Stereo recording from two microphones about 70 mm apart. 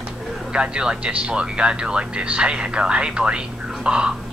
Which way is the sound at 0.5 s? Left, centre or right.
Centre.